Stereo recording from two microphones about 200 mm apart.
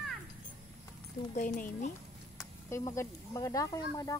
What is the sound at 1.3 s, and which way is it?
Speech, 40° left (ahead or behind).